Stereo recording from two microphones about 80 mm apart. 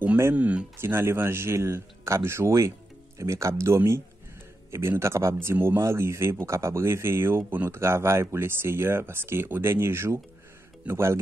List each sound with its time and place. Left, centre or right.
0.2 s speech: right
0.7 s speech: right